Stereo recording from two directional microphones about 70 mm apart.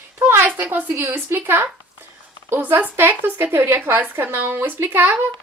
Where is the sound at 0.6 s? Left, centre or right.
Right.